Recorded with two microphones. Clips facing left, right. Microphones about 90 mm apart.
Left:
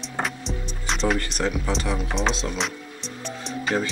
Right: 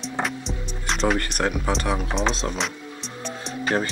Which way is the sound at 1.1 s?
55° right (ahead or behind).